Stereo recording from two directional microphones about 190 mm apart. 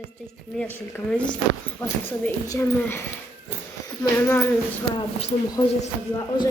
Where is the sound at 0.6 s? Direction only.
10° left (ahead or behind).